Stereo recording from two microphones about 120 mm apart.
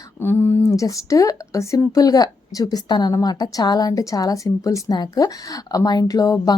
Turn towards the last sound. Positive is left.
turn(degrees=30)  # may be behind; listen again after turning